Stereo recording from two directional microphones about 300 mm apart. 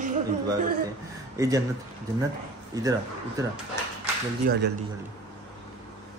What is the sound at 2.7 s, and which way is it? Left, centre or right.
Speech, centre.